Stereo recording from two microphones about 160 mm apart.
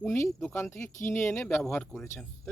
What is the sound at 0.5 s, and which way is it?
Speech, 15° left (ahead or behind).